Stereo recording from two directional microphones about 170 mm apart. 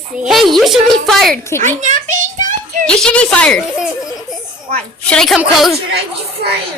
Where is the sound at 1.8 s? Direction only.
50° right (ahead or behind).